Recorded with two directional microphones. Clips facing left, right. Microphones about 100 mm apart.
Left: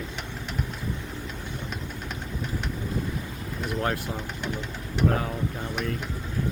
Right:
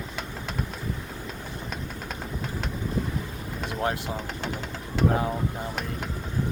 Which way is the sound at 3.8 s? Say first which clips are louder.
Right 1 dB; 20° right (ahead or behind).